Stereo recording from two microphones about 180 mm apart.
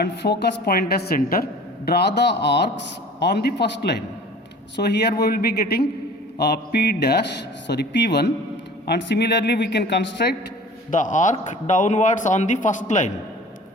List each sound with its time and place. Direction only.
0.0 s a woman's voice: 70° left (ahead or behind)
10.9 s speech: 45° left (ahead or behind)